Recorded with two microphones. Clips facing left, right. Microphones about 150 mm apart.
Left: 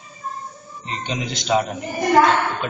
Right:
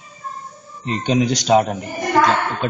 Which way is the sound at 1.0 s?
40° right (ahead or behind).